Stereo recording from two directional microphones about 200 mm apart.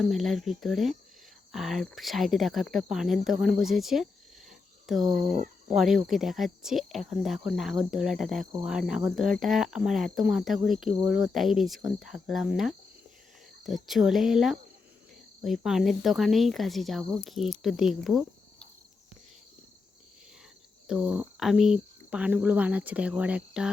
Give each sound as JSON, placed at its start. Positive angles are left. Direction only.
{"t": 0.0, "sound": "speech", "side_deg": 0}
{"t": 3.2, "sound": "a sound", "side_deg": 0}
{"t": 5.1, "sound": "speech", "side_deg": -40}
{"t": 5.7, "sound": "speech", "side_deg": 0}
{"t": 20.8, "sound": "speech", "side_deg": -5}